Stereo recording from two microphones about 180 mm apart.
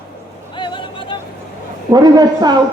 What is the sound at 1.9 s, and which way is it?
Speech, 20° right (ahead or behind).